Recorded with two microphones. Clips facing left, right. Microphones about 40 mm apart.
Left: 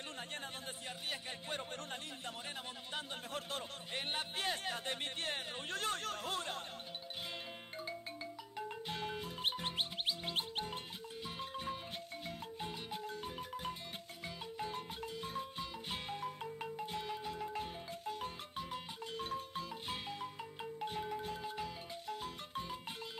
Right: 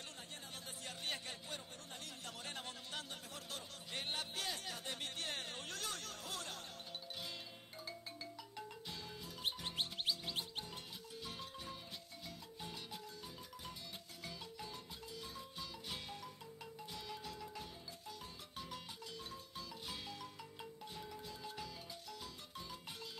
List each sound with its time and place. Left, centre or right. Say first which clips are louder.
3.9 s speech: left 3 dB; left
8.8 s music: left 8 dB; left
10.3 s speech: left 6 dB; left
11.5 s marimba: left 7 dB; left
15.9 s music: left 7 dB; left
17.1 s music: left 7 dB; left
19.1 s marimba: left 13 dB; left
21.5 s music: left 6 dB; left